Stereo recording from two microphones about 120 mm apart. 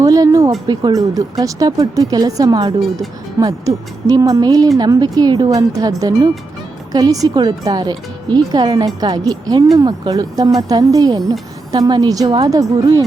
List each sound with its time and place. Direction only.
0.0 s speech: 30° right (ahead or behind)